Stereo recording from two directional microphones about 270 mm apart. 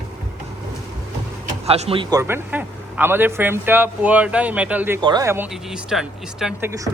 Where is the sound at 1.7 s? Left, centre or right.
Right.